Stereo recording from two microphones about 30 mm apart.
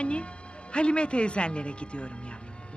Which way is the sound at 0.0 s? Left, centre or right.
Left.